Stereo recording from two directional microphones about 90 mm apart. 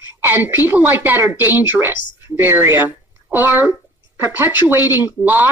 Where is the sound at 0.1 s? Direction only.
25° right (ahead or behind).